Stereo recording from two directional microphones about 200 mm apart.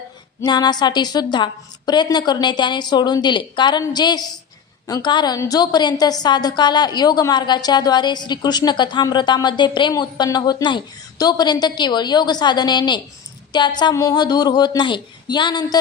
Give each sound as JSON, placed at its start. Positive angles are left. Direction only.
{"t": 0.4, "sound": "a woman's voice", "side_deg": 20}